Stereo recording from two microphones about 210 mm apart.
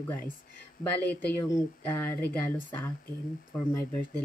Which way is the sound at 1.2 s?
10° left (ahead or behind).